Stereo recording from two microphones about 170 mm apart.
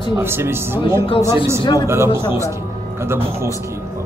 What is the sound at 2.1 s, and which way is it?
Speech, 30° left (ahead or behind).